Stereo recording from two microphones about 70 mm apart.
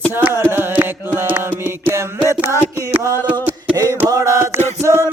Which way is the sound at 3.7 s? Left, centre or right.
Right.